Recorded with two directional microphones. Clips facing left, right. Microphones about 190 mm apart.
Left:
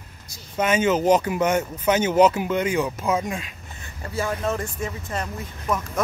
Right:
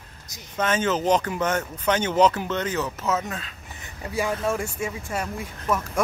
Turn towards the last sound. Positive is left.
turn(degrees=-10)  # may be behind; listen again after turning